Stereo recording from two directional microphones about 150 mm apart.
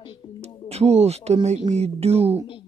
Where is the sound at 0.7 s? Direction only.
45° right (ahead or behind).